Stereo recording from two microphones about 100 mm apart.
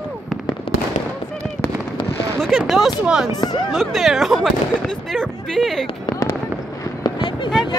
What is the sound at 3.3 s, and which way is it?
Speech, 40° left (ahead or behind).